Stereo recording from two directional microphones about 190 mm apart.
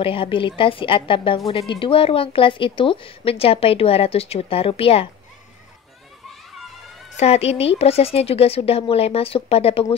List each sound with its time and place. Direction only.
0.0 s a woman's voice: 30° left (ahead or behind)
7.2 s a woman's voice: 35° left (ahead or behind)